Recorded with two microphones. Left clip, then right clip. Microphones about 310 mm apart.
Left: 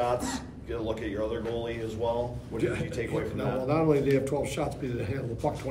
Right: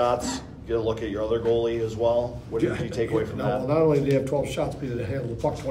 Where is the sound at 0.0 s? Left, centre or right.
Right.